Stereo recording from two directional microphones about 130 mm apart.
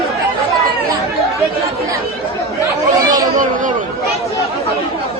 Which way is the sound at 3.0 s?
30° right (ahead or behind).